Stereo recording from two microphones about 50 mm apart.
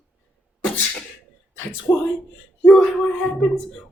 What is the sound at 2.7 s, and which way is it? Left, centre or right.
Speech, centre.